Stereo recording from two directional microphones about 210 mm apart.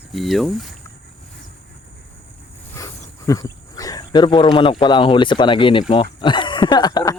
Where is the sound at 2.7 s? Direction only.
15° left (ahead or behind).